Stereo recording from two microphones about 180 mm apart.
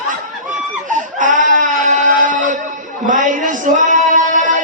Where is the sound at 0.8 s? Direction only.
45° right (ahead or behind).